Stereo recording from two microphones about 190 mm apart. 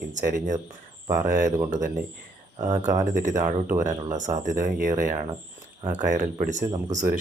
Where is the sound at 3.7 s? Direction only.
15° right (ahead or behind).